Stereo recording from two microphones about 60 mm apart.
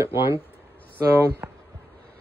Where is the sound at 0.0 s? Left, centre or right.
Right.